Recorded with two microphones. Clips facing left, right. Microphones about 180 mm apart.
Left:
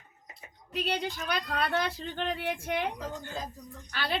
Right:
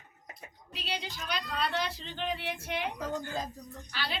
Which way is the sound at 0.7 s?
55° left (ahead or behind).